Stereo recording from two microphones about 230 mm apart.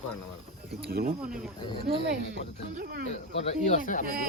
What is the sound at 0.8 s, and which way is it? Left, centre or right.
Speech, right.